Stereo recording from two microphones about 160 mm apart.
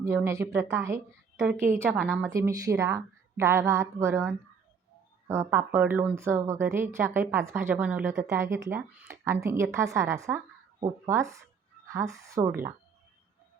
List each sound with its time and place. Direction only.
0.0 s a woman's voice: 15° right (ahead or behind)